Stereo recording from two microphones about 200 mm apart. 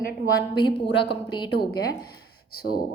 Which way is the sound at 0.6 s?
25° left (ahead or behind).